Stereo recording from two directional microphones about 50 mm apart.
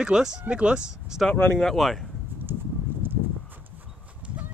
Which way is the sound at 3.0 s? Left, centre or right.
Right.